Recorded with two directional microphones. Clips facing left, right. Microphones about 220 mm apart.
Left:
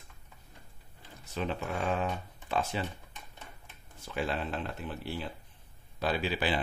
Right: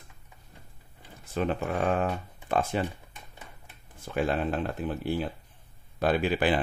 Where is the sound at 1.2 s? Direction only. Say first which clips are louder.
Right 6 dB; 50° right (ahead or behind).